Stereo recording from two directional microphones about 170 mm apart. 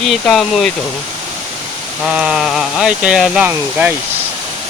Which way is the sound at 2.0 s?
5° right (ahead or behind).